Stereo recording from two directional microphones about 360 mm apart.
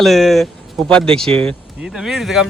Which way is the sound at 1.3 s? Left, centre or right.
Centre.